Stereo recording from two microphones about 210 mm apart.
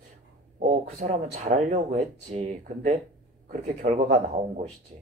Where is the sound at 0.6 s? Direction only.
35° right (ahead or behind).